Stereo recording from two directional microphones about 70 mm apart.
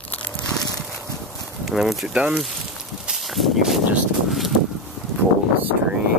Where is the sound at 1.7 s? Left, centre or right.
Centre.